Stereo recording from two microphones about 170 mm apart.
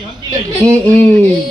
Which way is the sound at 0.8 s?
10° left (ahead or behind).